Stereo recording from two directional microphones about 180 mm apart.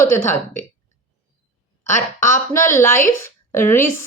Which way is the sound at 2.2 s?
15° left (ahead or behind).